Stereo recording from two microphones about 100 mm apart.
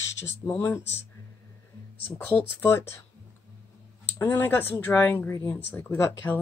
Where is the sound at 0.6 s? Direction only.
25° left (ahead or behind).